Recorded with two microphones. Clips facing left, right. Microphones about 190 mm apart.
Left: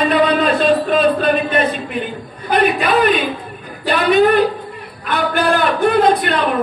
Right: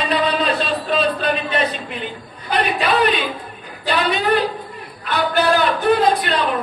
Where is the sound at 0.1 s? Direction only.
50° left (ahead or behind).